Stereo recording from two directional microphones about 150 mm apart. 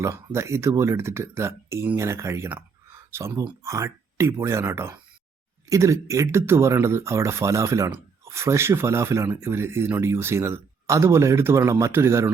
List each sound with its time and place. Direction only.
0.0 s speech: 20° right (ahead or behind)